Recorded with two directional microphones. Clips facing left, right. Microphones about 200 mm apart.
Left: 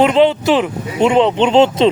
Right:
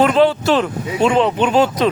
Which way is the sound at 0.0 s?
20° left (ahead or behind).